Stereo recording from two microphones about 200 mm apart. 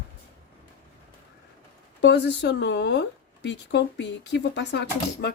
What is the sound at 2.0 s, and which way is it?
Speech, 60° left (ahead or behind).